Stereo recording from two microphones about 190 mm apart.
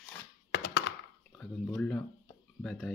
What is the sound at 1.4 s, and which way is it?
Speech, 5° left (ahead or behind).